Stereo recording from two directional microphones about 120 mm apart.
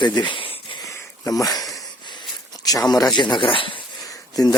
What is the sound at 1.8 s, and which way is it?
Wheeze, 40° left (ahead or behind).